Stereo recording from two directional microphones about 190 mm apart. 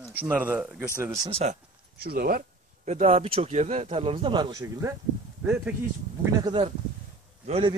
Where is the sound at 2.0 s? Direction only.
55° right (ahead or behind); by 5.7 s 10° right (ahead or behind).